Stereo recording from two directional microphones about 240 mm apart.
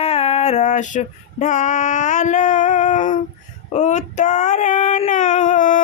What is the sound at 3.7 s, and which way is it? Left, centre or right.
Female singing, left.